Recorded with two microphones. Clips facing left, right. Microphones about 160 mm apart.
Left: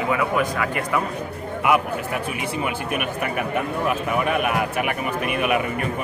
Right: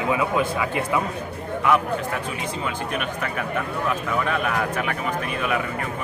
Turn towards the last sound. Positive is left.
turn(degrees=15)  # may be behind; listen again after turning